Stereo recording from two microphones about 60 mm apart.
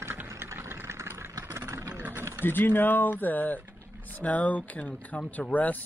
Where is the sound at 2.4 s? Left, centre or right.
Left.